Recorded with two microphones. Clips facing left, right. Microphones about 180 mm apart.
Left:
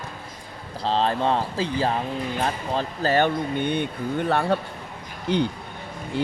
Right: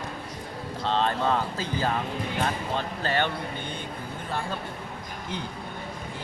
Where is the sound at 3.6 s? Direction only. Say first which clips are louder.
Left 10 dB; 65° left (ahead or behind).